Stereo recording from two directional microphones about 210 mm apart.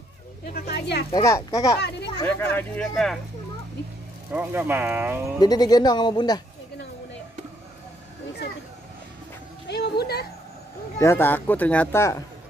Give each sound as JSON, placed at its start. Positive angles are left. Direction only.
{"t": 0.5, "sound": "speech", "side_deg": 50}
{"t": 1.1, "sound": "speech", "side_deg": 15}
{"t": 4.3, "sound": "speech", "side_deg": -10}
{"t": 5.4, "sound": "speech", "side_deg": 20}
{"t": 9.7, "sound": "a sound", "side_deg": 50}
{"t": 11.0, "sound": "speech", "side_deg": 10}